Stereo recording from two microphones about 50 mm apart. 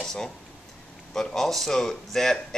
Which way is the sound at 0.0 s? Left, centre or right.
Centre.